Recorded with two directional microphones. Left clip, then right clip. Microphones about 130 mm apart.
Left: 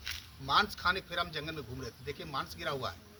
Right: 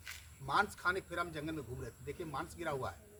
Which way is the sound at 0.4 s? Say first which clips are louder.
Left 5 dB; 10° right (ahead or behind).